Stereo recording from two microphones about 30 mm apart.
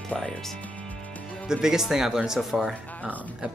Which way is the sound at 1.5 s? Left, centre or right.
Centre.